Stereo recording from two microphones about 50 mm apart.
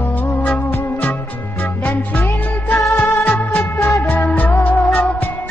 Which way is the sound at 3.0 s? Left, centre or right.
Left.